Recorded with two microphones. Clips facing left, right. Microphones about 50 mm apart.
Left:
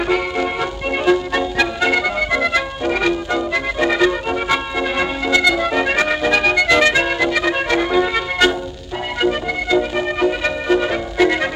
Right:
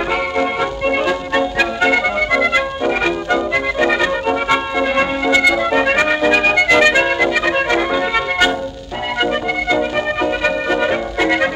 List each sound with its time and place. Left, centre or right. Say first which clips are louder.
0.1 s music: right 2 dB; centre
1.6 s music: right 1 dB; right
4.5 s organ: right 3 dB; right
5.3 s music: right 1 dB; right
8.1 s music: right 1 dB; centre
9.8 s music: right 1 dB; centre